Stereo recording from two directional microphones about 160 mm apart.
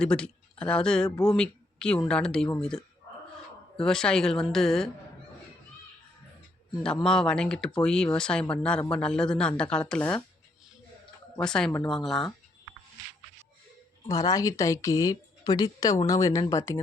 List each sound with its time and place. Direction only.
0.0 s speech: 5° left (ahead or behind)
1.1 s a woman's voice: 20° left (ahead or behind)
1.4 s speech: 5° left (ahead or behind)
6.8 s speech: 5° left (ahead or behind)
11.3 s speech: 5° left (ahead or behind)
14.1 s a woman's voice: 20° left (ahead or behind)